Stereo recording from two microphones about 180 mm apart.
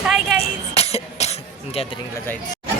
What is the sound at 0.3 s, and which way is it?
Cough, 35° left (ahead or behind).